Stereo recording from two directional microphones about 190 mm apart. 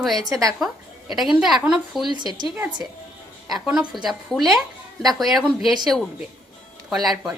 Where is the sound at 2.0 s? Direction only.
25° right (ahead or behind).